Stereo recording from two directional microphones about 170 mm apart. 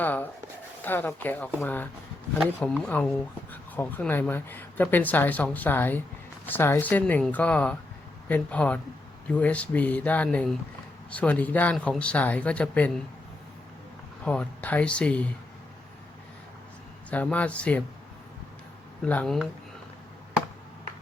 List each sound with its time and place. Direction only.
0.0 s a sound: 10° left (ahead or behind)
0.8 s speech: 10° left (ahead or behind)
14.3 s speech: 10° left (ahead or behind)
17.1 s speech: 10° left (ahead or behind)
19.0 s speech: 5° left (ahead or behind)